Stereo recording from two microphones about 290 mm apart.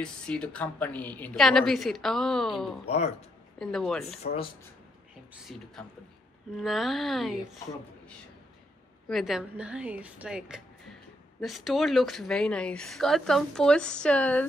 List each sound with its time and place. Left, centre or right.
0.0 s speech: centre
2.8 s speech: left
3.5 s speech: centre
4.2 s speech: left
5.3 s speech: centre
9.1 s speech: centre